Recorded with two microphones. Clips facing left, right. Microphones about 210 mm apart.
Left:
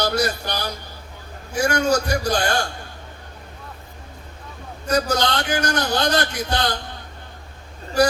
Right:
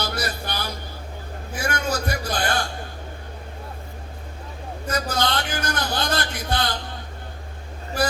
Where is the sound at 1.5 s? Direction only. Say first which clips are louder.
Left 7 dB; 55° right (ahead or behind).